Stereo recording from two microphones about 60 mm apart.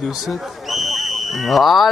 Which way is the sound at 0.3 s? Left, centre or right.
Centre.